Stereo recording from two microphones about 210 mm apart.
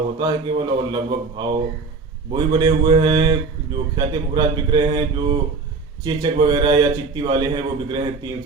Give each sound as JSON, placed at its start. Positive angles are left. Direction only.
{"t": 0.2, "sound": "a man's voice", "side_deg": -20}